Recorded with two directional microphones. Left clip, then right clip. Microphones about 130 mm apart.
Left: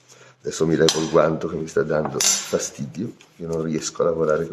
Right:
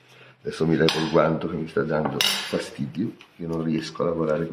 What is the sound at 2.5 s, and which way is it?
Speech, 65° left (ahead or behind).